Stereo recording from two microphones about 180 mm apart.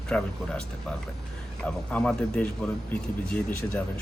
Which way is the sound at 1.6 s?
5° left (ahead or behind).